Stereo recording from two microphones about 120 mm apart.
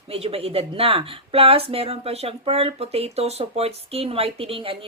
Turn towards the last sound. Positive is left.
turn(degrees=-50)  # may be behind; listen again after turning